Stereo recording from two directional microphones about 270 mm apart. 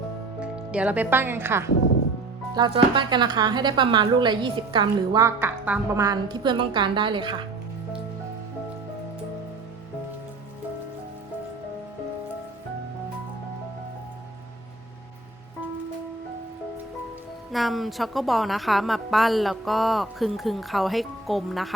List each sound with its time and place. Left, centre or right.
0.3 s a woman's voice: centre
17.5 s a woman's voice: centre